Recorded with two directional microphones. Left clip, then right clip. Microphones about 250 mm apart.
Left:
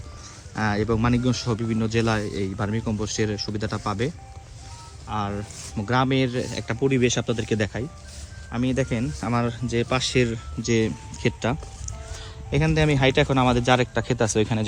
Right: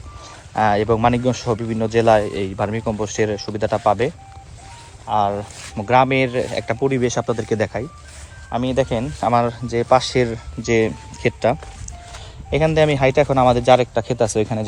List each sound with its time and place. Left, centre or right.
0.5 s speech: centre
5.3 s speech: centre